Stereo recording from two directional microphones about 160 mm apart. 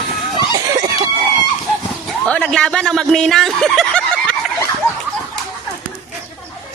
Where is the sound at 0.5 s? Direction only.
25° right (ahead or behind).